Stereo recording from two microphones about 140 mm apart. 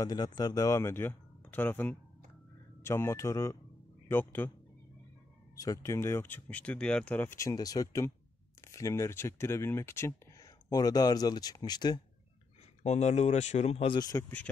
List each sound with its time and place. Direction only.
0.0 s speech: 30° left (ahead or behind)
5.6 s speech: 25° left (ahead or behind)
12.8 s speech: 55° left (ahead or behind)
13.9 s speech: 25° left (ahead or behind)